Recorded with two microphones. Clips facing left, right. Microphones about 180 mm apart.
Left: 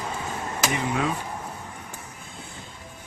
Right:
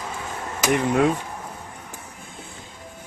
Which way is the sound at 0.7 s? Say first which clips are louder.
Right 9 dB; 65° right (ahead or behind).